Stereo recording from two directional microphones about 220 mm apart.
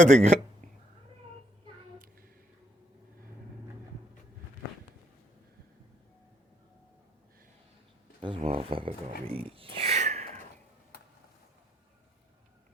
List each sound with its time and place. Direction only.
0.0 s speech: 30° right (ahead or behind)
8.2 s speech: 25° right (ahead or behind)